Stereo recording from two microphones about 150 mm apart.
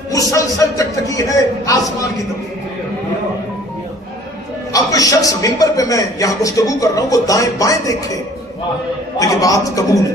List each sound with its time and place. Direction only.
0.1 s a man's voice: 20° left (ahead or behind)
4.7 s a man's voice: 25° left (ahead or behind)
9.2 s a man's voice: 25° left (ahead or behind)